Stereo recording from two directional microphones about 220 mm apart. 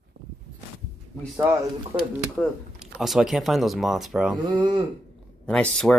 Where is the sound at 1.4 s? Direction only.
15° right (ahead or behind).